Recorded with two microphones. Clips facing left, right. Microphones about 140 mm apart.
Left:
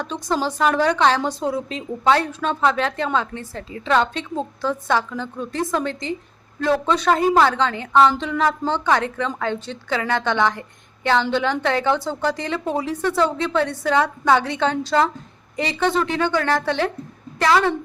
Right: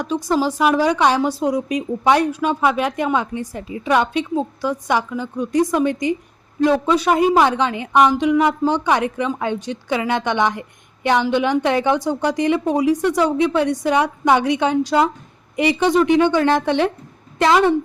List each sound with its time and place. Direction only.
0.0 s a woman's voice: 10° right (ahead or behind)